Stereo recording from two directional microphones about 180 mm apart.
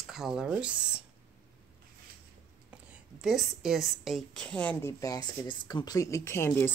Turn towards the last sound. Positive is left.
turn(degrees=15)  # may be behind; listen again after turning